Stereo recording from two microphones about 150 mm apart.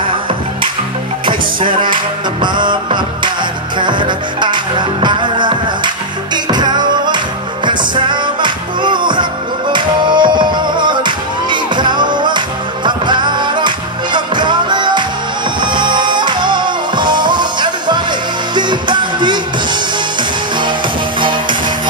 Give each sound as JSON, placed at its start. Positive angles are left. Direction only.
{"t": 1.2, "sound": "music", "side_deg": -35}